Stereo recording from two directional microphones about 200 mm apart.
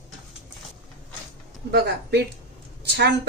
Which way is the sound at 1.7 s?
55° right (ahead or behind).